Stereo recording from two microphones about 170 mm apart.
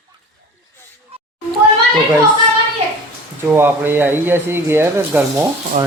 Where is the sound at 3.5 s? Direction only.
10° right (ahead or behind).